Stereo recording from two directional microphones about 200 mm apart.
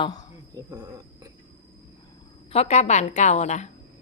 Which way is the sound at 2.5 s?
30° left (ahead or behind).